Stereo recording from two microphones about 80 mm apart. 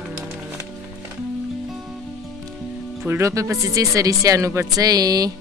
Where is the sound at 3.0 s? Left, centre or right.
Right.